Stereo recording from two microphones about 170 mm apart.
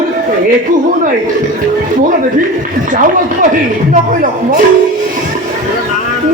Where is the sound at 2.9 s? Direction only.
50° right (ahead or behind).